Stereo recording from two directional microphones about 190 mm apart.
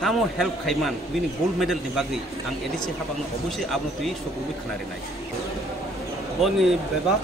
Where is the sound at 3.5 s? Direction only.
Centre (ahead or behind).